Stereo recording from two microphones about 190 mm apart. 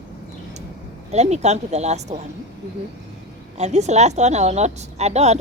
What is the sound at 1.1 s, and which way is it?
Speech, 35° right (ahead or behind).